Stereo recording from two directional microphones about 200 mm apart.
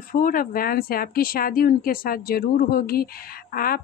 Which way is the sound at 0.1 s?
45° left (ahead or behind).